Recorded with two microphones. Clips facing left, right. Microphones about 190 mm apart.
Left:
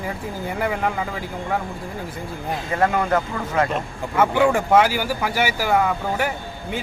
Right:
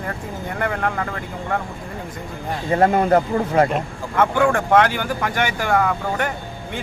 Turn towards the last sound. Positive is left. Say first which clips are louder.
# even
turn(degrees=5)  # may be behind; listen again after turning